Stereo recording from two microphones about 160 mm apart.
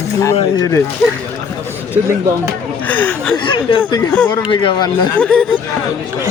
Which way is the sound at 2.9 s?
10° left (ahead or behind).